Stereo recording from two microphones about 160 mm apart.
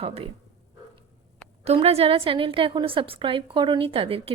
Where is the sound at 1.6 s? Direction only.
40° right (ahead or behind).